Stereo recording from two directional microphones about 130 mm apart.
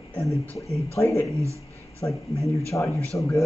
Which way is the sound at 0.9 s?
20° left (ahead or behind).